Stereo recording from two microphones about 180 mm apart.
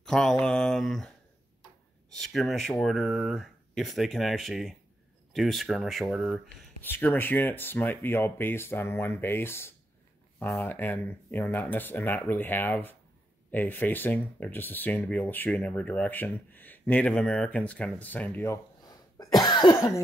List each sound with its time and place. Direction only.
0.0 s mantra: 5° left (ahead or behind)
2.1 s speech: centre (ahead or behind); by 19.9 s 25° left (ahead or behind)